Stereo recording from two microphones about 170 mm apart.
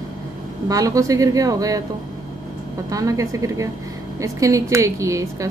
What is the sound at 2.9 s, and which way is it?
Speech, 20° right (ahead or behind).